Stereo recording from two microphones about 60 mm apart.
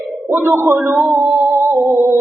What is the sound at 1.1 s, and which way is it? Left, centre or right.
Speech, centre.